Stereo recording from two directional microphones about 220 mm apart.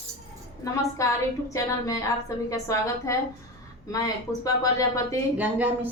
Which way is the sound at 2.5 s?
15° left (ahead or behind).